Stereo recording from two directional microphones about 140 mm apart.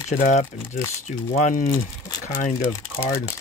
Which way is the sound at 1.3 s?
65° left (ahead or behind).